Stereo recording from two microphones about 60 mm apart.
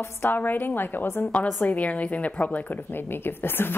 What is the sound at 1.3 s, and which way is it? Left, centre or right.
A woman's voice, left.